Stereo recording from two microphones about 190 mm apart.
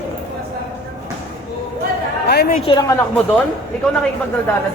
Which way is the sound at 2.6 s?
25° left (ahead or behind).